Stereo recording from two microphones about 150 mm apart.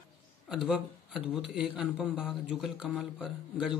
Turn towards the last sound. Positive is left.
turn(degrees=-5)  # may be behind; listen again after turning